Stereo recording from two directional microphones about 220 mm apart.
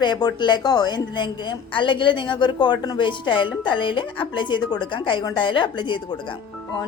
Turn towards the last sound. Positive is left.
turn(degrees=20)  # may be behind; listen again after turning